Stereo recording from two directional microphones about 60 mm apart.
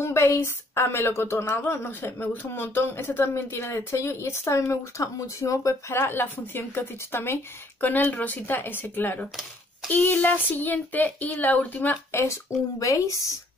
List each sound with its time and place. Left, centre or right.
0.0 s speech: left
5.9 s speech: left
7.8 s speech: left
12.1 s speech: left